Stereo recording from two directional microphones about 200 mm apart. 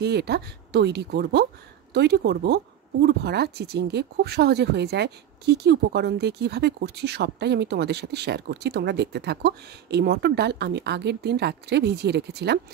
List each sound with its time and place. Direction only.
0.0 s speech: 55° right (ahead or behind)